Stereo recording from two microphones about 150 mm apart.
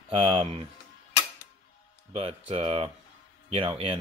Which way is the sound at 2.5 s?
40° right (ahead or behind).